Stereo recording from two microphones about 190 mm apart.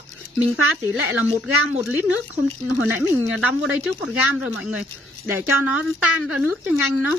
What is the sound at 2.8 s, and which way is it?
Speech, 90° right.